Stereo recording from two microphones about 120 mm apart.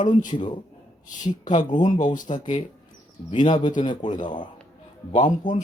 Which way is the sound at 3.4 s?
40° left (ahead or behind).